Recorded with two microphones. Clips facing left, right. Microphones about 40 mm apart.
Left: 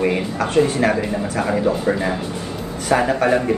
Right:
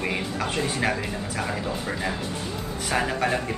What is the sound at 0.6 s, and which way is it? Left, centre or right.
Speech, centre.